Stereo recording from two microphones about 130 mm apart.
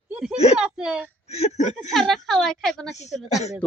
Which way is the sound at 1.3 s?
55° left (ahead or behind).